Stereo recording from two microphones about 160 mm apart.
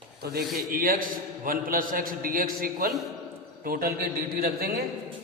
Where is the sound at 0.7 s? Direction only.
60° right (ahead or behind).